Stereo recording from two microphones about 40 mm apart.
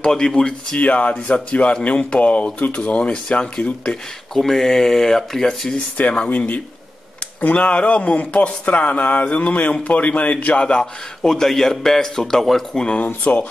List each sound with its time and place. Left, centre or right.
0.0 s speech: centre
0.7 s speech: left
4.3 s a man's voice: centre
5.9 s speech: left
10.8 s a man's voice: centre
12.7 s speech: left
13.0 s speech: left